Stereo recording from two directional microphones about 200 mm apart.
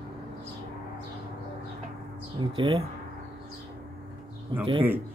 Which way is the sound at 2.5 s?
25° right (ahead or behind).